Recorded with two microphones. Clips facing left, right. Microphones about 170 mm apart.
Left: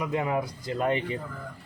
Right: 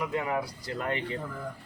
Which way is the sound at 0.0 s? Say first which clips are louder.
Left 2 dB; 20° left (ahead or behind).